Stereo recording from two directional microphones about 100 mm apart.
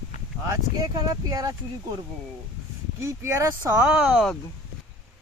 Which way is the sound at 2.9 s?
25° right (ahead or behind).